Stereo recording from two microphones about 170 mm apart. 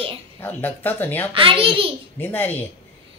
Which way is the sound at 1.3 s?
30° right (ahead or behind).